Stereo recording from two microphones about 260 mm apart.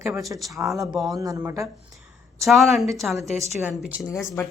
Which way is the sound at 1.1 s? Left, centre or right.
Centre.